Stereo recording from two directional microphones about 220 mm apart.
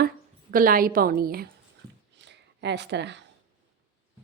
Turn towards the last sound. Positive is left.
turn(degrees=-50)  # may be behind; listen again after turning